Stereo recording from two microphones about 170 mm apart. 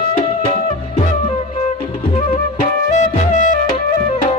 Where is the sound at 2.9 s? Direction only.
45° left (ahead or behind).